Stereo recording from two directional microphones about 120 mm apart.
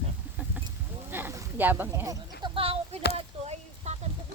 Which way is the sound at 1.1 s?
15° right (ahead or behind).